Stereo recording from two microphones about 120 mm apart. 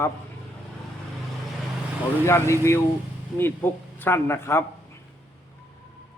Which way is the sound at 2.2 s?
20° left (ahead or behind).